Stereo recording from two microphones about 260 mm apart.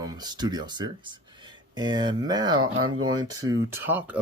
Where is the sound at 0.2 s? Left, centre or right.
Centre.